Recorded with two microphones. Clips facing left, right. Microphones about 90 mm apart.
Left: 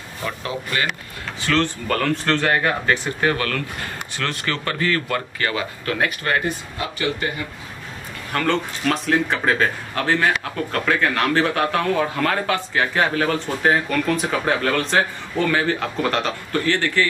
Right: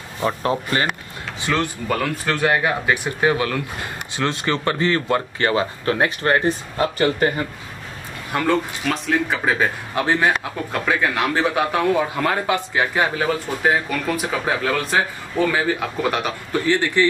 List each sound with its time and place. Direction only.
0.2 s speech: 35° right (ahead or behind)
1.4 s speech: 15° right (ahead or behind); by 7.4 s 40° right (ahead or behind)
8.3 s a man's voice: 15° right (ahead or behind)
8.8 s a man's voice: centre (ahead or behind); by 17.0 s 15° right (ahead or behind)